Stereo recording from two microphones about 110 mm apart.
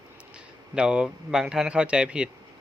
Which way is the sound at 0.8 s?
10° right (ahead or behind).